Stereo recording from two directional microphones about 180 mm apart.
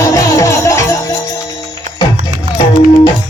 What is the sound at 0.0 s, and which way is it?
Music, 20° left (ahead or behind).